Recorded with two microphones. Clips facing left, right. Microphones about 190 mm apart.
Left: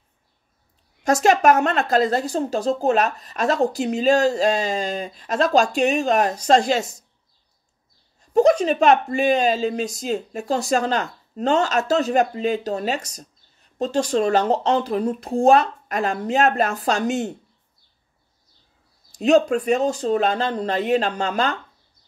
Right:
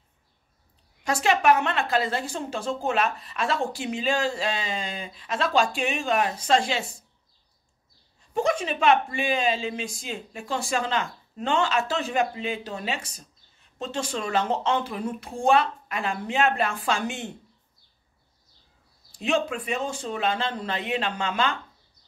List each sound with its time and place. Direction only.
1.0 s speech: 45° left (ahead or behind)
8.2 s speech: 40° left (ahead or behind)
19.1 s speech: 40° left (ahead or behind)